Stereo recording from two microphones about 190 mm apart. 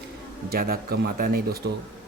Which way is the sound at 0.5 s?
50° right (ahead or behind).